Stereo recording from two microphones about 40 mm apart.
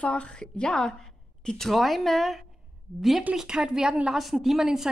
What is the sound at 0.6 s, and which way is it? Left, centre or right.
A woman's voice, centre.